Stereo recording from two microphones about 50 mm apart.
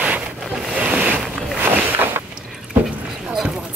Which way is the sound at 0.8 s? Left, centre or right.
Right.